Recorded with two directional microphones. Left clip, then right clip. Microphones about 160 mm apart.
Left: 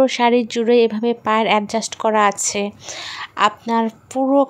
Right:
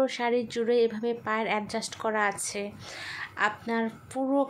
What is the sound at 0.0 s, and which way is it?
A woman's voice, 50° left (ahead or behind).